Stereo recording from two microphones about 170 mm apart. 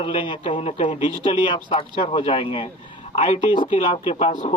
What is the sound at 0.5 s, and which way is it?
A man's voice, 30° left (ahead or behind).